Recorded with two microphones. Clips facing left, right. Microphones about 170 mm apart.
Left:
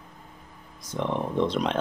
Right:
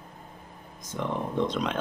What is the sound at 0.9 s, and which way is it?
Speech, 30° left (ahead or behind).